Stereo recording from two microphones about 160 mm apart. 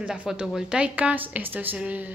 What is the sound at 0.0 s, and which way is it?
A woman's voice, 5° right (ahead or behind).